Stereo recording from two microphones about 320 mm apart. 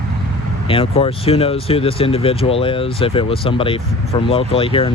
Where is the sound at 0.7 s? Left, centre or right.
Centre.